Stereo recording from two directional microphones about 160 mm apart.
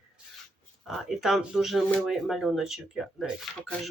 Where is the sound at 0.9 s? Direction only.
Centre (ahead or behind).